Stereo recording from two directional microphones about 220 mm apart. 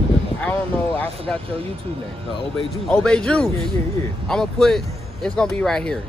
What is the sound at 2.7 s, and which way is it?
Speech, 5° left (ahead or behind).